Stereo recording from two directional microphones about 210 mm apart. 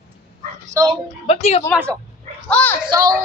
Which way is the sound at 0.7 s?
20° right (ahead or behind).